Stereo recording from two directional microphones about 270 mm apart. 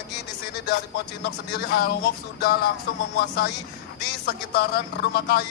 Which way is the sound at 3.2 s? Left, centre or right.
Left.